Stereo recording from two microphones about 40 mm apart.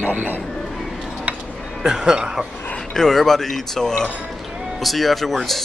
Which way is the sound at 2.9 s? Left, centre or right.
Centre.